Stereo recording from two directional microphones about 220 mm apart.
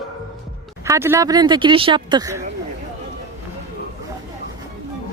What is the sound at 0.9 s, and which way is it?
A woman's voice, 10° right (ahead or behind).